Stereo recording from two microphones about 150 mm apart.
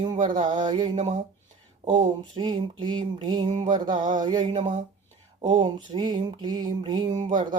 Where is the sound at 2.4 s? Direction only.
30° right (ahead or behind).